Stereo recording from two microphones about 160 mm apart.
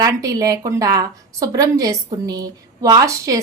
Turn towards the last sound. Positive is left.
turn(degrees=-20)  # may be behind; listen again after turning